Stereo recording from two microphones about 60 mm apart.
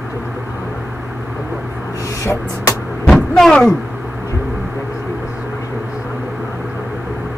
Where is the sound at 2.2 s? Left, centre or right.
Left.